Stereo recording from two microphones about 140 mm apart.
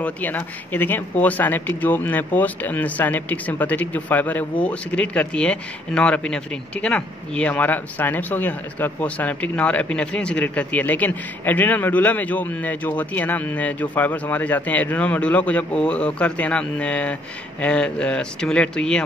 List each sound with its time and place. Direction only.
0.0 s speech: 10° left (ahead or behind)